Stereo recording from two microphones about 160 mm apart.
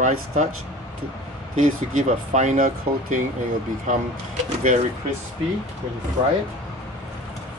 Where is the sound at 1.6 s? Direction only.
50° right (ahead or behind).